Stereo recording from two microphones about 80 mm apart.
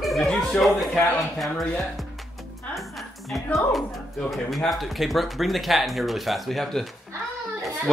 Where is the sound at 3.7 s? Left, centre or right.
Centre.